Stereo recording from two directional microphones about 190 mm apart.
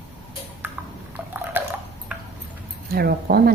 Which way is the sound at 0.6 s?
10° right (ahead or behind).